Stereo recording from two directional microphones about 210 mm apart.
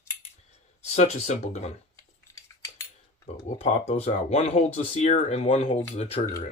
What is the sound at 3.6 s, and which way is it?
Speech, 30° left (ahead or behind).